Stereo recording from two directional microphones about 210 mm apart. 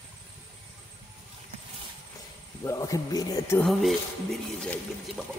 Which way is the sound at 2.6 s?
15° left (ahead or behind).